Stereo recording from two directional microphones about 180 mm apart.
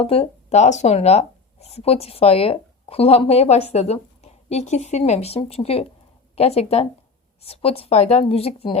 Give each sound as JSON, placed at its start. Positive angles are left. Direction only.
{"t": 0.0, "sound": "speech", "side_deg": 30}